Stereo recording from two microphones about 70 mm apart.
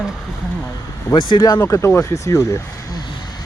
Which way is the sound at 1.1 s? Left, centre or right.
Left.